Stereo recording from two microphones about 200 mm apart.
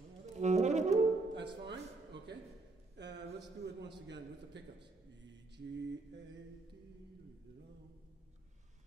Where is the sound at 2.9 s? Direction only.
60° right (ahead or behind).